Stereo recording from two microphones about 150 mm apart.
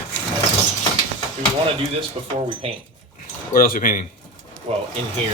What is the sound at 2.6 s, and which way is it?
Speech, 45° right (ahead or behind).